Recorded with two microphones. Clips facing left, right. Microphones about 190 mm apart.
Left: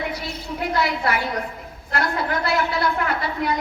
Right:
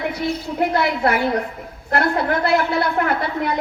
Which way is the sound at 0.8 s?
55° right (ahead or behind).